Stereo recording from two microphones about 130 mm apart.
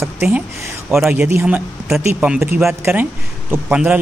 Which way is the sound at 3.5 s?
10° right (ahead or behind).